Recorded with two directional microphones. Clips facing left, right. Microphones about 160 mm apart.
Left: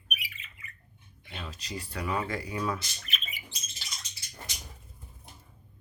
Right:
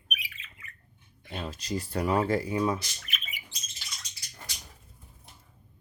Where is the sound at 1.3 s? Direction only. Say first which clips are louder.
Right 6 dB; 45° right (ahead or behind); by 2.8 s 25° right (ahead or behind).